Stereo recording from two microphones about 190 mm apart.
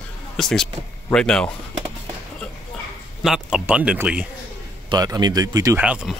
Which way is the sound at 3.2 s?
5° right (ahead or behind).